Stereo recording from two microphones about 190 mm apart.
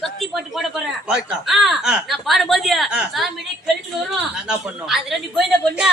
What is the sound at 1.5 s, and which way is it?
A woman's voice, centre (ahead or behind).